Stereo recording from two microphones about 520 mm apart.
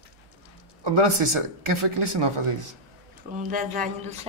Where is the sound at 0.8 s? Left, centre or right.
Right.